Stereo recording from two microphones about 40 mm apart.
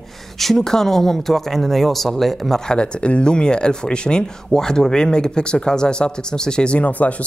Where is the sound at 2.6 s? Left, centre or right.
Left.